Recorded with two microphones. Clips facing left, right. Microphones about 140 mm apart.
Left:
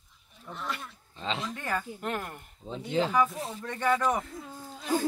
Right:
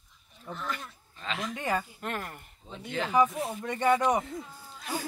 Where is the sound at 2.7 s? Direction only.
30° left (ahead or behind).